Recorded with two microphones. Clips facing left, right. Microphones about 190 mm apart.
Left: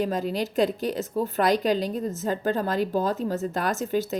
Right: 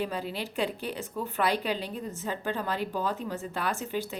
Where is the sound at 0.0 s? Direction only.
45° left (ahead or behind).